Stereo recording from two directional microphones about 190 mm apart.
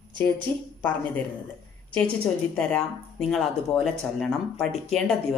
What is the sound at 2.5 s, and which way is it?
Speech, 5° left (ahead or behind).